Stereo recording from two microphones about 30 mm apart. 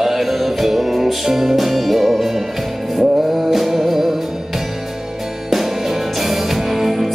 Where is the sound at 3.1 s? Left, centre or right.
Right.